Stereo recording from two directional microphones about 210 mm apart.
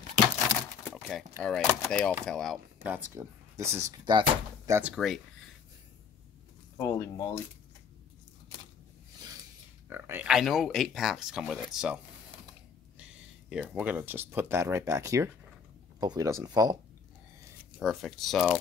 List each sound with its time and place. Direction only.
0.8 s a sound: centre (ahead or behind)
1.4 s speech: centre (ahead or behind)
6.8 s speech: 15° left (ahead or behind)
9.8 s speech: 10° right (ahead or behind)
13.5 s speech: 5° right (ahead or behind)
17.7 s speech: centre (ahead or behind)